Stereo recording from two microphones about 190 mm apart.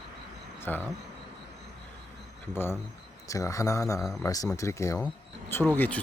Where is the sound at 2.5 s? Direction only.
10° left (ahead or behind).